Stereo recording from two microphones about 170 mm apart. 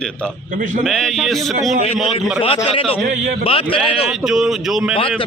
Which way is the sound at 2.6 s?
35° left (ahead or behind).